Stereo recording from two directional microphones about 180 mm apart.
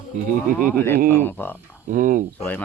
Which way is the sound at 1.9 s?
50° right (ahead or behind).